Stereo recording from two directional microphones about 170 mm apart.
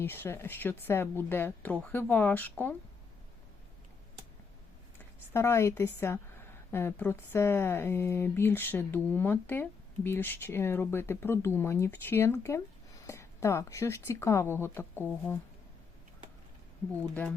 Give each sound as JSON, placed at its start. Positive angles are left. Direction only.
{"t": 0.0, "sound": "speech", "side_deg": 15}
{"t": 5.3, "sound": "speech", "side_deg": 15}